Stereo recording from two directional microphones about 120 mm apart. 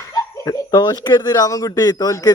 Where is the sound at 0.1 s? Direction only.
30° left (ahead or behind).